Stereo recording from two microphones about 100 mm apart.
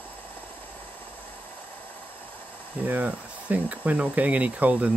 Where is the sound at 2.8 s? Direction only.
15° right (ahead or behind).